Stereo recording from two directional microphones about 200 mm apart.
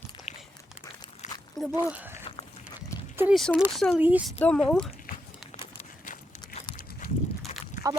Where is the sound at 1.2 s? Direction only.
35° left (ahead or behind).